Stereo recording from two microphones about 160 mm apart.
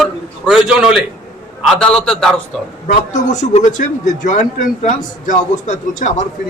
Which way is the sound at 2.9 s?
45° left (ahead or behind).